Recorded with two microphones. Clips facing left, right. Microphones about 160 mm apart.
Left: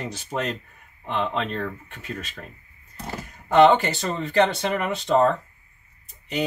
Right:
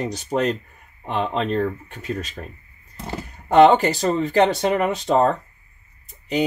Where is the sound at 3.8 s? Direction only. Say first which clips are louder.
Right 7 dB; 40° right (ahead or behind).